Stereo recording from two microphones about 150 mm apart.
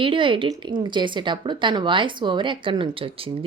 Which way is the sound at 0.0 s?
35° right (ahead or behind).